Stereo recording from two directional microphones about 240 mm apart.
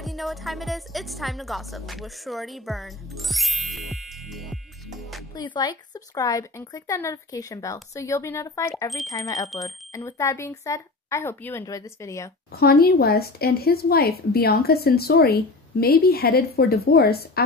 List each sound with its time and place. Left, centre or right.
0.0 s speech: centre
5.3 s speech: centre
12.5 s speech: left